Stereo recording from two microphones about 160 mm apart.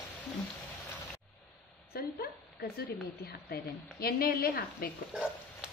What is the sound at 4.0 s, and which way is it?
Speech, 70° left (ahead or behind).